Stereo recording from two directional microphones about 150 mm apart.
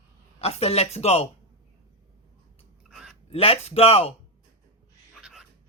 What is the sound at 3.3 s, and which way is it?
Speech, 40° left (ahead or behind).